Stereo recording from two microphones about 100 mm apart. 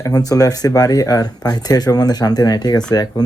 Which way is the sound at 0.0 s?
40° left (ahead or behind).